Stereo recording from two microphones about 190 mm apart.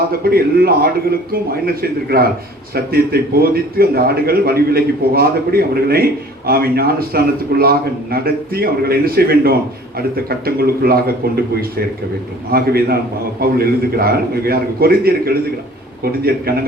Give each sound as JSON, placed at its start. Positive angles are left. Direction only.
{"t": 0.3, "sound": "a man's voice", "side_deg": -55}
{"t": 12.5, "sound": "a man's voice", "side_deg": -55}